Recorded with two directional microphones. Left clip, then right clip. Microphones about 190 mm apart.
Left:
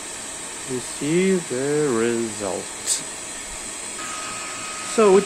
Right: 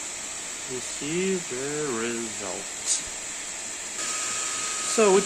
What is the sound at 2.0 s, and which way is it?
Speech, 30° left (ahead or behind).